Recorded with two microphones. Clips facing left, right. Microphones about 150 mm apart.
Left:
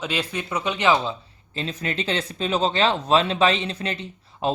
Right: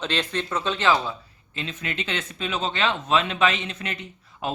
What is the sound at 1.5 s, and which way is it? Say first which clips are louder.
Speech: left 4 dB; 35° left (ahead or behind).